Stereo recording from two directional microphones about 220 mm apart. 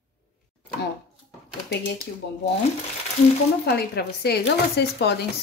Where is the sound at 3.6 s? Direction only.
45° left (ahead or behind).